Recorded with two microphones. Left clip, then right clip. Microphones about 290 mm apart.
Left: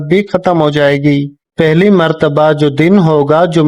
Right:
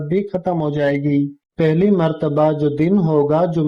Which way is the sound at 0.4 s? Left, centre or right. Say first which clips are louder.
Left 10 dB; left.